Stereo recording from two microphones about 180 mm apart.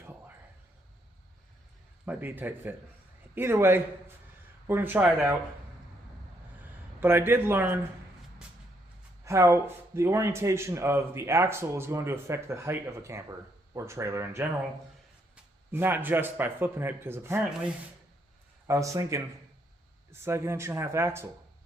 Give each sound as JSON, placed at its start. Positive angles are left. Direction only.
{"t": 2.0, "sound": "a man's voice", "side_deg": -10}
{"t": 7.0, "sound": "a man's voice", "side_deg": -10}
{"t": 9.2, "sound": "a man's voice", "side_deg": -15}
{"t": 15.7, "sound": "a man's voice", "side_deg": -10}
{"t": 18.7, "sound": "a man's voice", "side_deg": -20}